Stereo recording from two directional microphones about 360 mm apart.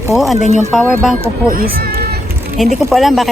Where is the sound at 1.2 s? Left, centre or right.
Right.